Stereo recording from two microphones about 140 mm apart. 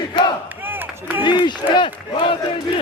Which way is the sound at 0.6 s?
15° right (ahead or behind).